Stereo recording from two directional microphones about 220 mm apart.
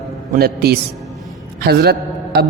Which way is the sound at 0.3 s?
45° right (ahead or behind).